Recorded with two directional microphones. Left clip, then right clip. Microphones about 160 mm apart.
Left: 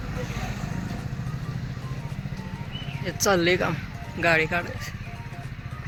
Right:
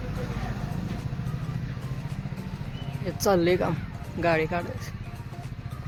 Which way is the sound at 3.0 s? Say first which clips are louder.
Left 1 dB; 15° right (ahead or behind).